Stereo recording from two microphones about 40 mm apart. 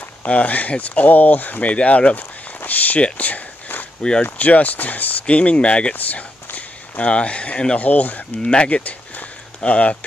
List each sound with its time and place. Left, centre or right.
0.2 s speech: left
2.6 s speech: left
5.2 s speech: left
5.9 s speech: left
7.8 s speech: left
8.4 s speech: left
8.6 s speech: left